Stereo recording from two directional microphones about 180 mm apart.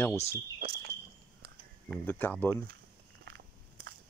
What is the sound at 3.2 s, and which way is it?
Crushing, 75° right (ahead or behind).